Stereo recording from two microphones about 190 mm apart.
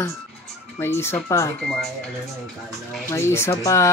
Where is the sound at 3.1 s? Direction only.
15° left (ahead or behind).